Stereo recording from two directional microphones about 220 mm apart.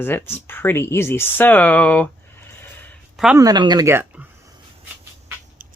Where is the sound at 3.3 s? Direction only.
15° right (ahead or behind).